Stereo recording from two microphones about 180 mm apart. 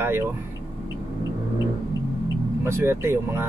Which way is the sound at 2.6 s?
15° right (ahead or behind).